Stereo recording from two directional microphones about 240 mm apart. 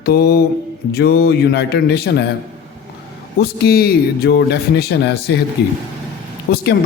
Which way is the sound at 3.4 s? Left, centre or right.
Left.